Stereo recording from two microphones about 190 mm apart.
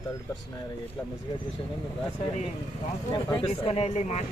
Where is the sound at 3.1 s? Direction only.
25° left (ahead or behind).